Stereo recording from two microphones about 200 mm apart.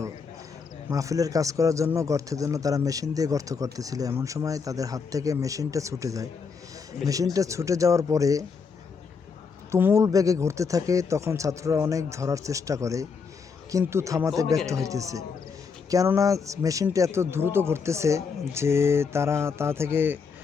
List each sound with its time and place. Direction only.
0.9 s a man's voice: 15° right (ahead or behind)
7.3 s a man's voice: 15° right (ahead or behind)
9.7 s a man's voice: 15° right (ahead or behind)